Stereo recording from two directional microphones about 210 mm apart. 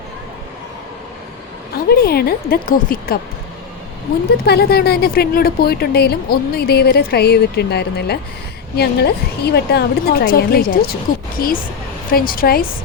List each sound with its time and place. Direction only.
1.9 s a woman's voice: 50° left (ahead or behind)
4.4 s a woman's voice: 50° left (ahead or behind)